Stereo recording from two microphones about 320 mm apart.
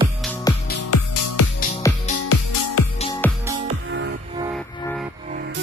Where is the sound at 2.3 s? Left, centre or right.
Left.